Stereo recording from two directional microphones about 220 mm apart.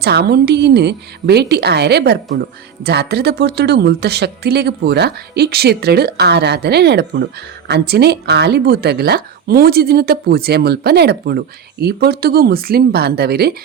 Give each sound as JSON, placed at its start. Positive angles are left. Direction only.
{"t": 0.0, "sound": "a woman's voice", "side_deg": -50}